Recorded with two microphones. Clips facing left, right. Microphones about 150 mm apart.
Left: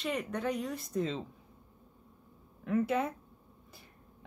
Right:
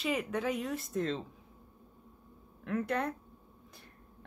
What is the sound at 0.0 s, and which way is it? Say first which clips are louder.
A woman's voice: right 1 dB; 5° right (ahead or behind).